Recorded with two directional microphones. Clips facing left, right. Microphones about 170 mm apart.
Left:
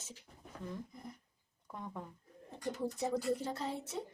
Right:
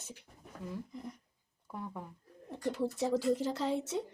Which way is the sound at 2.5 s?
65° right (ahead or behind).